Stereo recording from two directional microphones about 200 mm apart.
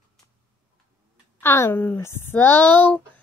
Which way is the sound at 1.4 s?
10° left (ahead or behind).